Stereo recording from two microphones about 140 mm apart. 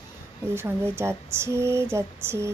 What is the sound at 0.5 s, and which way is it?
Speech, 15° right (ahead or behind).